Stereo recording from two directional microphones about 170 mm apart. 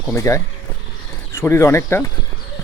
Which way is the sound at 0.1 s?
15° left (ahead or behind).